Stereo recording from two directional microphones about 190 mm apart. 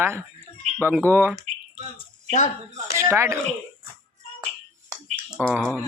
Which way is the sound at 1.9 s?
35° left (ahead or behind).